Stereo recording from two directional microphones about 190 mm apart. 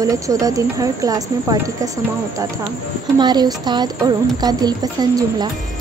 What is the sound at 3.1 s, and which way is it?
Speech, 20° right (ahead or behind).